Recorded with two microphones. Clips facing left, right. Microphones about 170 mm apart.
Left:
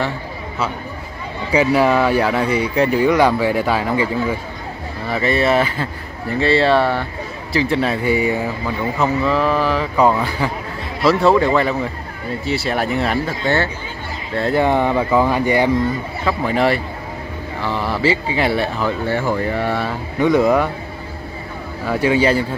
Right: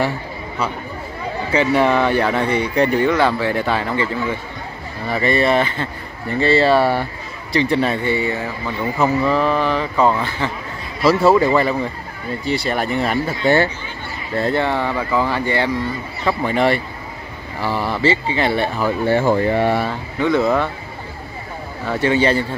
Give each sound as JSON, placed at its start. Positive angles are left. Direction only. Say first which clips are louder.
{"t": 1.5, "sound": "speech", "louder": "left 1 dB", "side_deg": 5}
{"t": 9.0, "sound": "speech", "louder": "right 1 dB", "side_deg": 0}
{"t": 14.3, "sound": "speech", "louder": "even", "side_deg": 0}
{"t": 14.6, "sound": "speech", "louder": "left 4 dB", "side_deg": 15}
{"t": 16.3, "sound": "speech", "louder": "even", "side_deg": 0}
{"t": 19.0, "sound": "speech", "louder": "right 7 dB", "side_deg": -25}
{"t": 20.2, "sound": "speech", "louder": "left 2 dB", "side_deg": 15}
{"t": 22.0, "sound": "speech", "louder": "left 1 dB", "side_deg": 10}